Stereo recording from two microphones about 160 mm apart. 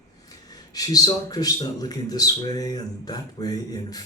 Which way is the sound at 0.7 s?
25° left (ahead or behind).